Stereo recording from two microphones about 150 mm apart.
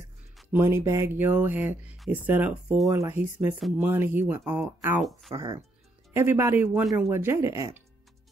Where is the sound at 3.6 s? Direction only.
Centre (ahead or behind).